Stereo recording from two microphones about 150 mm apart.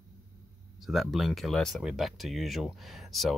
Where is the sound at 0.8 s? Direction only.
Centre (ahead or behind).